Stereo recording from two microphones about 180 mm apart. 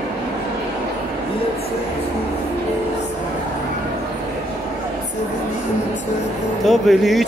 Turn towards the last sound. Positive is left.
turn(degrees=0)  # may be behind; listen again after turning